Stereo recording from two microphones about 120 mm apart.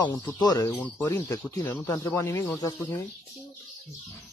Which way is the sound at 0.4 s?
30° left (ahead or behind).